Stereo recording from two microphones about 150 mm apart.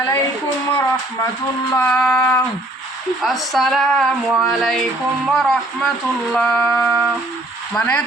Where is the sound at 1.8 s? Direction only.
10° left (ahead or behind).